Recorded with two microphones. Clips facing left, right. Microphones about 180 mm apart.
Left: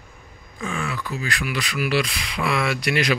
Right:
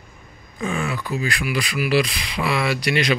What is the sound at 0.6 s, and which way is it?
Speech, 15° right (ahead or behind).